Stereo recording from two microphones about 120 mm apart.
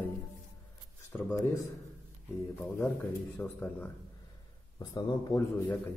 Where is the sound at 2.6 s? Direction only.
20° left (ahead or behind).